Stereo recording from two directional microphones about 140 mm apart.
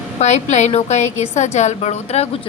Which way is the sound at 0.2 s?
55° left (ahead or behind).